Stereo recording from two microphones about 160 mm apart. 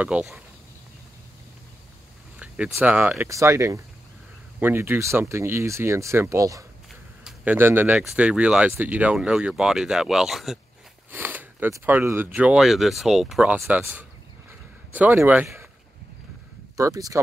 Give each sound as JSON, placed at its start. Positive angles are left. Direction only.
{"t": 0.0, "sound": "speech", "side_deg": -10}
{"t": 2.3, "sound": "speech", "side_deg": -5}
{"t": 11.1, "sound": "speech", "side_deg": -10}
{"t": 16.7, "sound": "speech", "side_deg": -20}